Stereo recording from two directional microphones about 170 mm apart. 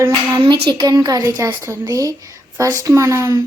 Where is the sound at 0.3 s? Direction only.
25° right (ahead or behind).